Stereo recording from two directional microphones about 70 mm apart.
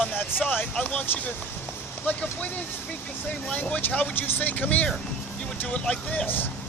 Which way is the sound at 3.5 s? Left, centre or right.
Left.